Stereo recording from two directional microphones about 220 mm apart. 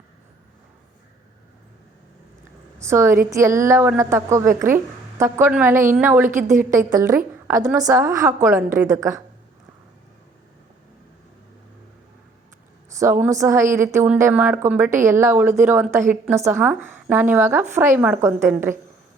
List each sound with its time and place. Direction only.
2.7 s a woman's voice: 10° right (ahead or behind)
6.2 s a woman's voice: 35° right (ahead or behind)
6.7 s a woman's voice: 15° right (ahead or behind)
13.0 s a woman's voice: 10° right (ahead or behind)